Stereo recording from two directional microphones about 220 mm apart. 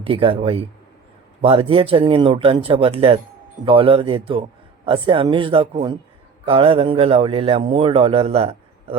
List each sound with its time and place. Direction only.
0.0 s a man's voice: 25° right (ahead or behind)